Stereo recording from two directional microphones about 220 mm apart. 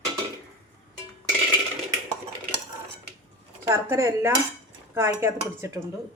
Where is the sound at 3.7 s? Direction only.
10° right (ahead or behind).